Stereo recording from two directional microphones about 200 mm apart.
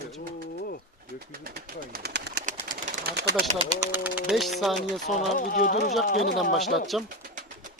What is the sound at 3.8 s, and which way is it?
Speech, 10° right (ahead or behind).